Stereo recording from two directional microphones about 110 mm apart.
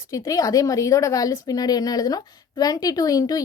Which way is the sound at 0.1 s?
30° left (ahead or behind).